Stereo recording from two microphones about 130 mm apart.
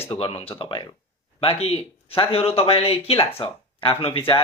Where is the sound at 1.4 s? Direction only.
50° left (ahead or behind).